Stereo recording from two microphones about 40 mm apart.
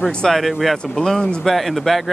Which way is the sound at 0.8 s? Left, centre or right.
Centre.